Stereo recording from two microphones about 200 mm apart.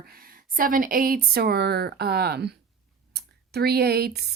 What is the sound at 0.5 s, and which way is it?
A woman's voice, 45° right (ahead or behind).